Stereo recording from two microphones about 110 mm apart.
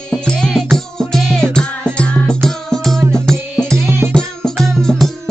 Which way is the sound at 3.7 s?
25° right (ahead or behind).